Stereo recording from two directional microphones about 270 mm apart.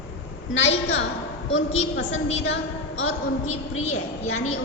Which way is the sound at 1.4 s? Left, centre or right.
Left.